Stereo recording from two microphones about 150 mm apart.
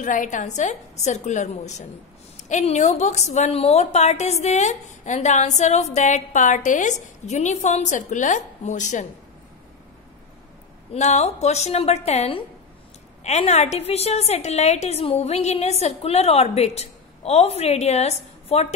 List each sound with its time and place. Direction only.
0.0 s a woman's voice: 60° left (ahead or behind)
10.9 s a woman's voice: 50° left (ahead or behind)